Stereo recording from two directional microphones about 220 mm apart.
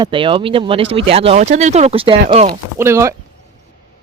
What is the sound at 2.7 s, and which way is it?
Speech, 10° right (ahead or behind).